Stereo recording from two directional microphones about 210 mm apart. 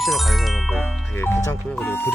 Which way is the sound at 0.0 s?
Centre (ahead or behind).